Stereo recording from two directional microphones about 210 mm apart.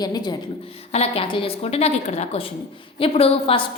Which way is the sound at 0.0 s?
20° left (ahead or behind).